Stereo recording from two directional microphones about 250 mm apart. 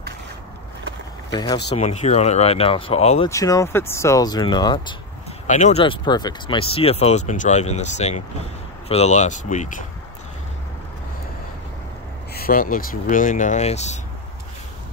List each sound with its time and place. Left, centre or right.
1.3 s speech: centre
1.8 s speech: left
3.3 s speech: centre
5.5 s speech: left
12.4 s speech: left